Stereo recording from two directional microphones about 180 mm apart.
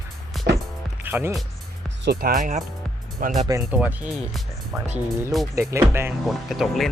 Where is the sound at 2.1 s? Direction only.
55° right (ahead or behind).